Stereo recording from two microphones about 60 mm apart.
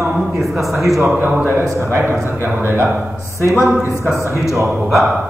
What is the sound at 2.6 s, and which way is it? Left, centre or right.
Speech, right.